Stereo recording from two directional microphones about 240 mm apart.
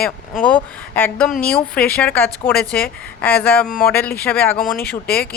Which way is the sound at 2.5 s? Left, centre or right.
Left.